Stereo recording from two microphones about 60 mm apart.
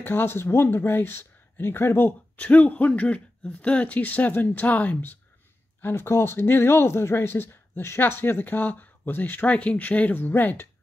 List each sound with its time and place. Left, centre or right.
0.0 s speech: left
2.3 s speech: left
5.8 s speech: left